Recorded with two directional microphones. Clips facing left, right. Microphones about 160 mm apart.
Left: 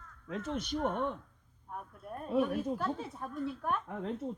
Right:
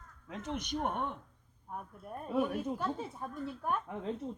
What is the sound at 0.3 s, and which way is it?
Speech, 15° right (ahead or behind).